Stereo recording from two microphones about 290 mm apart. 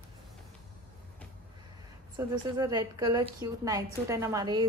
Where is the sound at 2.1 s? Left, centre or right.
Centre.